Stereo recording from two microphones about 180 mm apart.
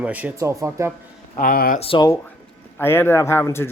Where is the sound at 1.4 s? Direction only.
55° left (ahead or behind).